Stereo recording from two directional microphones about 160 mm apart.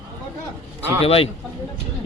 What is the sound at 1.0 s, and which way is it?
Speech, 35° left (ahead or behind).